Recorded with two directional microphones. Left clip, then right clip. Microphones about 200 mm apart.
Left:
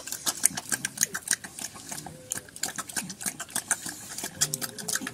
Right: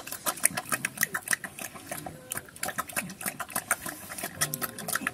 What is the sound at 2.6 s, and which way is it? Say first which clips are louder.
Stir: right 3 dB; 25° right (ahead or behind).